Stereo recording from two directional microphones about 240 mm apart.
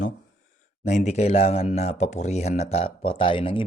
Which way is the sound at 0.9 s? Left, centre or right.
Left.